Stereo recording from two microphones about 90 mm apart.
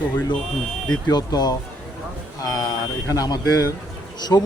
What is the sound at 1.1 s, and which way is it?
A man's voice, 50° left (ahead or behind).